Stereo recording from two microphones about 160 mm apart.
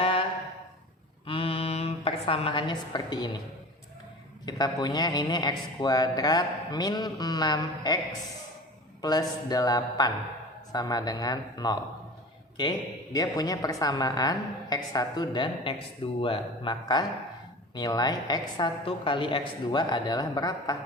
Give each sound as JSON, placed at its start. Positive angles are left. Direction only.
{"t": 0.0, "sound": "a sound", "side_deg": 35}
{"t": 1.3, "sound": "a woman's voice", "side_deg": 35}
{"t": 4.4, "sound": "speech", "side_deg": 25}
{"t": 13.1, "sound": "speech", "side_deg": 20}